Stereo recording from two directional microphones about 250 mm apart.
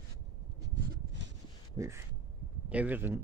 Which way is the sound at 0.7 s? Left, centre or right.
Right.